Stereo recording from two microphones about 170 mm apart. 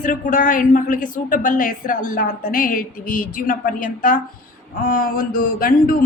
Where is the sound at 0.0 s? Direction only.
50° left (ahead or behind).